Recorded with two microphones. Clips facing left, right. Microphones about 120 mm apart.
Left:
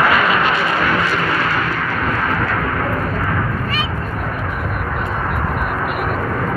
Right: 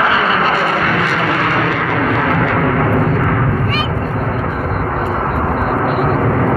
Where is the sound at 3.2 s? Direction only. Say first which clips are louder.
Right 5 dB; 55° right (ahead or behind).